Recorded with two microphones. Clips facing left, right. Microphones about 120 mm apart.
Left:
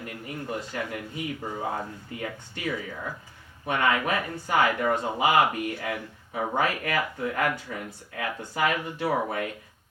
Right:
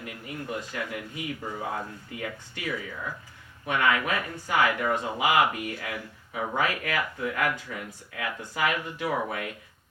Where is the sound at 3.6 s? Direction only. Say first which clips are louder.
Left 1 dB; 30° left (ahead or behind).